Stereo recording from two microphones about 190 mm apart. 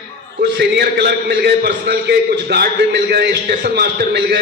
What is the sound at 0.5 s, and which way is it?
A man's voice, 55° right (ahead or behind).